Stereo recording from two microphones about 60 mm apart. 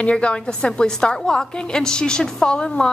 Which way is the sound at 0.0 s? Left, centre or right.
Centre.